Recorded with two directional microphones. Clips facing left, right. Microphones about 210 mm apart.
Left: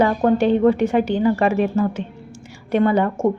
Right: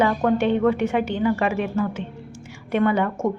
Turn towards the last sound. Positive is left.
turn(degrees=35)  # may be behind; listen again after turning